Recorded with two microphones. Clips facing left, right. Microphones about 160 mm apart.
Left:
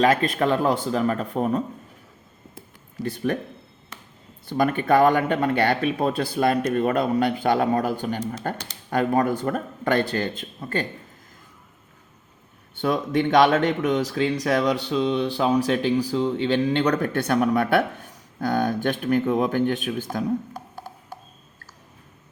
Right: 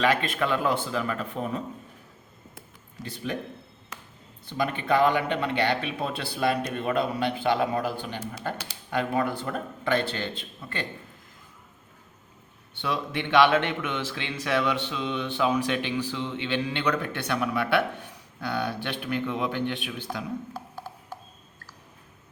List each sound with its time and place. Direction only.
0.0 s speech: 40° left (ahead or behind)
3.0 s speech: 50° left (ahead or behind)
4.4 s speech: 50° left (ahead or behind)
12.7 s speech: 45° left (ahead or behind)
20.5 s music: 15° left (ahead or behind)